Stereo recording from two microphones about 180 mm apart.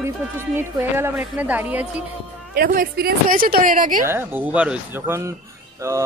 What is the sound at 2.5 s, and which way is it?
A woman's voice, 55° right (ahead or behind).